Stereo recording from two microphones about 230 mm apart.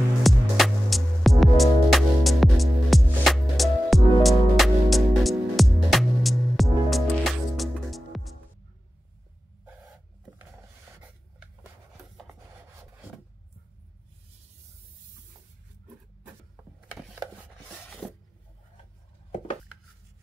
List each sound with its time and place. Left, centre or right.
0.2 s music: centre
17.4 s rub: centre